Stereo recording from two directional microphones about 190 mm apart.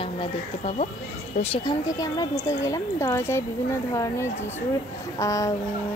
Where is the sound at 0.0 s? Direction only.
30° left (ahead or behind).